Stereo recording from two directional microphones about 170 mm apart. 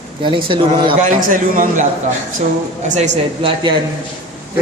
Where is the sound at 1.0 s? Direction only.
50° right (ahead or behind).